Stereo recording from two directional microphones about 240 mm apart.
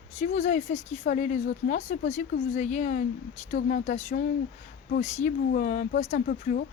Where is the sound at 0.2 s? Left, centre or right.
Left.